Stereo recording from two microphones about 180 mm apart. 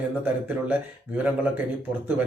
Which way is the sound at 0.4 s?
10° right (ahead or behind).